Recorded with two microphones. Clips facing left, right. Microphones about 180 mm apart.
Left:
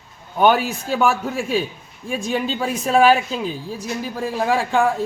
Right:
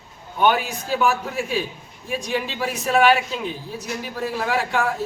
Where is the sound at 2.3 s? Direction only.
30° left (ahead or behind).